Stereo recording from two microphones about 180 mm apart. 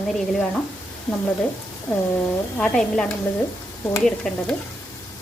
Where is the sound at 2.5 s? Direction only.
5° left (ahead or behind).